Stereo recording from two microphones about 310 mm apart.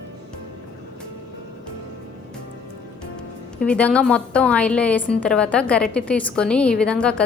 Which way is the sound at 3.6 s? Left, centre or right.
Centre.